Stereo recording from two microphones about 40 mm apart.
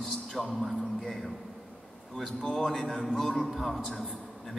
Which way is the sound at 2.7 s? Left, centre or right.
Centre.